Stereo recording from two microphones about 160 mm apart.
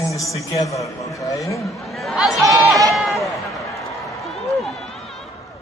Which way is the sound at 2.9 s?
Centre (ahead or behind).